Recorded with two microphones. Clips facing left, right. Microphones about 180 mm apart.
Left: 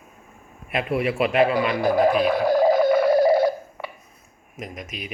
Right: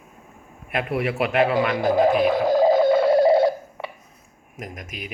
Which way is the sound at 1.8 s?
20° right (ahead or behind).